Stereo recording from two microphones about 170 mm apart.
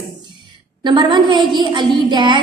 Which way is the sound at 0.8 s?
25° right (ahead or behind).